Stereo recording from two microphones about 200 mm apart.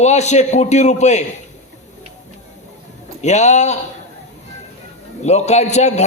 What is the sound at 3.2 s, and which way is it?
Speech, 35° left (ahead or behind).